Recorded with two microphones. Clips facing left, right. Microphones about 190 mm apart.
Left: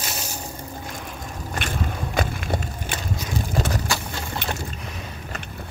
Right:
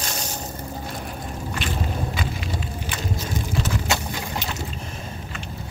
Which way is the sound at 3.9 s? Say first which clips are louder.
Right 2 dB; 20° right (ahead or behind).